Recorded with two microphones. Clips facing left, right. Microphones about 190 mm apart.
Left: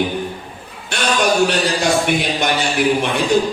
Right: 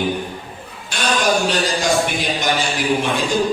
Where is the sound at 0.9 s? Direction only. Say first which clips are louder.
Left 2 dB; 60° left (ahead or behind).